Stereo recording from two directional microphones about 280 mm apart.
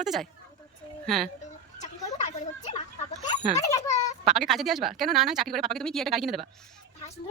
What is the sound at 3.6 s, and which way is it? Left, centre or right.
Speech, centre.